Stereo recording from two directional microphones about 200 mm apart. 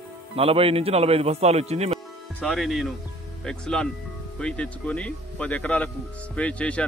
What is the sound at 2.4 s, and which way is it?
Speech, centre (ahead or behind).